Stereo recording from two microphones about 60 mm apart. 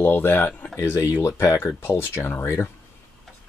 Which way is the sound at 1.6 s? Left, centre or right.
Left.